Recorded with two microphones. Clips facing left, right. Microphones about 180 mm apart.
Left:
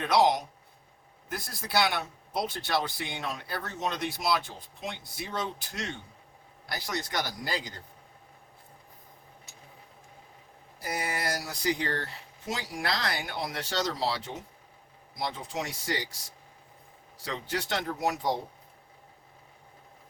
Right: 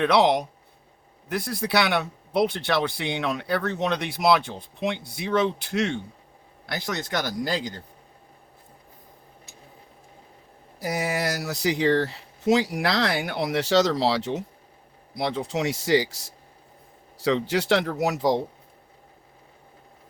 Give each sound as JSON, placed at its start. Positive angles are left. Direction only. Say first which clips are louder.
{"t": 0.0, "sound": "speech", "louder": "right 5 dB", "side_deg": -65}
{"t": 6.7, "sound": "speech", "louder": "right 5 dB", "side_deg": -80}
{"t": 10.8, "sound": "speech", "louder": "right 7 dB", "side_deg": -75}
{"t": 17.2, "sound": "speech", "louder": "right 12 dB", "side_deg": -75}